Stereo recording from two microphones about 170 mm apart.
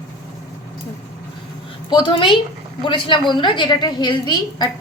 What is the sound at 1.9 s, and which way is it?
A woman's voice, 30° left (ahead or behind).